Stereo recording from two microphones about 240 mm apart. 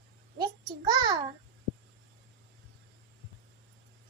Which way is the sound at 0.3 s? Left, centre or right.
Centre.